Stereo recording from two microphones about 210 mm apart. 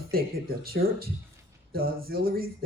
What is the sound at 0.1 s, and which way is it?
Speech, 45° right (ahead or behind).